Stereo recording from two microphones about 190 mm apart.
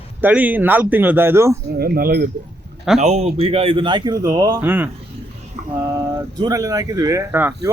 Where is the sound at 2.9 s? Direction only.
35° right (ahead or behind); by 4.9 s 10° right (ahead or behind).